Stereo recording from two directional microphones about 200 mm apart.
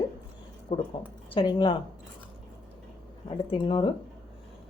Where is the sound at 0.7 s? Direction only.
30° left (ahead or behind).